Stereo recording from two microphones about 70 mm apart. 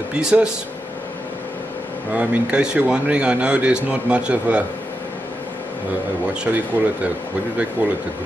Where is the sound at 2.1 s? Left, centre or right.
Centre.